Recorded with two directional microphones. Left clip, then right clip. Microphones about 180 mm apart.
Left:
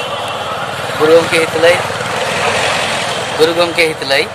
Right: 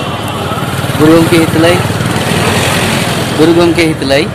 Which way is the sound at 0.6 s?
50° right (ahead or behind).